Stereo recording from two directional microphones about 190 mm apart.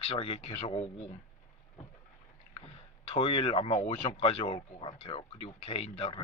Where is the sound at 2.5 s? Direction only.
30° left (ahead or behind).